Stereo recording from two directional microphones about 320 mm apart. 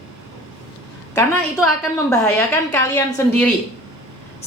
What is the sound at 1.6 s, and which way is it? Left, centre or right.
A woman's voice, centre.